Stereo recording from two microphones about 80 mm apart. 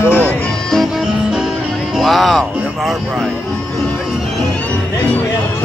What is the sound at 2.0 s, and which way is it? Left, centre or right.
Music, centre.